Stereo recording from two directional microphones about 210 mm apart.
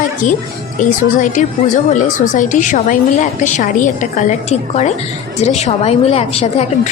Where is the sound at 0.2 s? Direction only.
35° left (ahead or behind).